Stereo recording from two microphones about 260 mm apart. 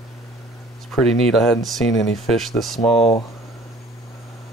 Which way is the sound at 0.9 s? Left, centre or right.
Centre.